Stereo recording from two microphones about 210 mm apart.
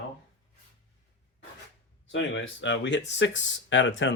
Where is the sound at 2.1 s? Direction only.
60° left (ahead or behind).